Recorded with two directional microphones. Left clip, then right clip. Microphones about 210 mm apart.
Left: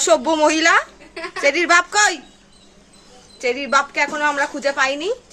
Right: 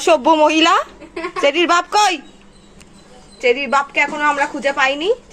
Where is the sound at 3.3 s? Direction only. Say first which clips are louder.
Right 3 dB; 15° left (ahead or behind).